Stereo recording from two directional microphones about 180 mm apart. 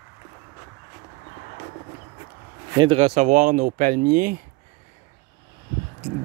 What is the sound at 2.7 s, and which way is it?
Speech, 25° right (ahead or behind).